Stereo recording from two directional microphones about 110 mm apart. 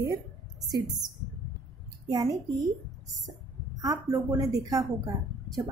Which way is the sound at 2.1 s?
30° right (ahead or behind).